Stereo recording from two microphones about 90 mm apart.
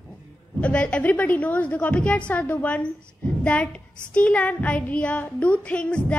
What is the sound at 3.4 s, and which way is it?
Speech, 15° left (ahead or behind).